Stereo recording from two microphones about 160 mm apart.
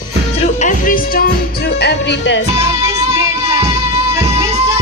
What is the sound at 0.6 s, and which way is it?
Music, 60° left (ahead or behind).